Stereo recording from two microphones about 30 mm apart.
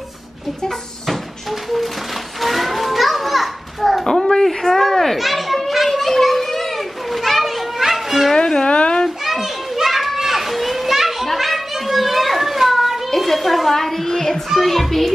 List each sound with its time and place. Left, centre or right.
0.7 s cupboard open or close: centre
1.5 s a sound: centre
2.4 s children playing: centre
4.5 s children playing: centre
8.6 s a sound: left
9.2 s children playing: centre
13.2 s a sound: centre
13.7 s child singing: centre
14.5 s a child's voice: centre